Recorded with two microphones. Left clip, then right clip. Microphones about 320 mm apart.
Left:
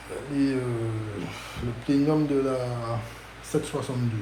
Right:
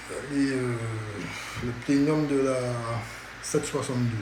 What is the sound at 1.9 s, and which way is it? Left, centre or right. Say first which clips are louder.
Speech: left 1 dB; centre.